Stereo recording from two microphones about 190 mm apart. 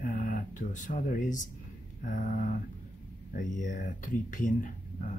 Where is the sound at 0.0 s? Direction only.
45° left (ahead or behind).